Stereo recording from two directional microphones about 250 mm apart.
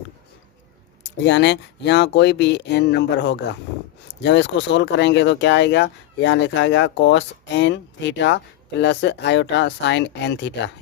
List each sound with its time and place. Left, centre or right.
1.0 s speech: left